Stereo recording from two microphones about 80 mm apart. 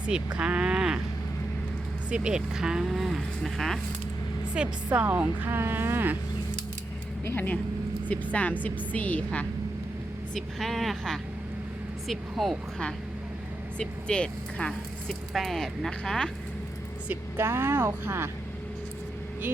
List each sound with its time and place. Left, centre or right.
0.0 s speech: centre
2.0 s speech: centre
4.5 s speech: centre
7.3 s a woman's voice: left
10.6 s speech: centre
13.7 s a woman's voice: centre
15.3 s speech: centre
17.3 s speech: right